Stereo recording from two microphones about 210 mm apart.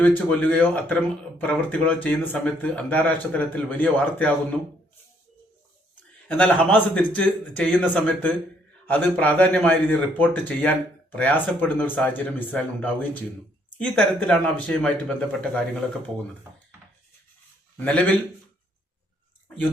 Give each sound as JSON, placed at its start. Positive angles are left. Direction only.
{"t": 0.0, "sound": "speech", "side_deg": 5}
{"t": 6.0, "sound": "speech", "side_deg": 5}
{"t": 17.7, "sound": "a man's voice", "side_deg": 5}